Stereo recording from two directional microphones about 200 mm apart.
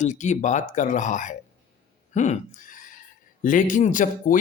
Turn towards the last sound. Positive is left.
turn(degrees=40)  # may be behind; listen again after turning